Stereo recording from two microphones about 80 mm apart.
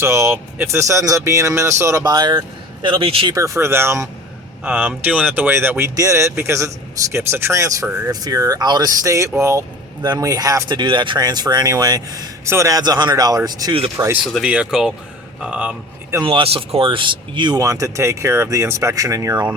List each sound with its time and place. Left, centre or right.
0.0 s speech: right
2.0 s speech: right
2.8 s speech: right
3.3 s speech: right
4.6 s a man's voice: right
8.1 s speech: right
9.0 s speech: right
10.0 s speech: right
10.8 s speech: right
12.5 s speech: right
12.8 s speech: right
14.4 s speech: centre
16.2 s speech: right
17.6 s speech: right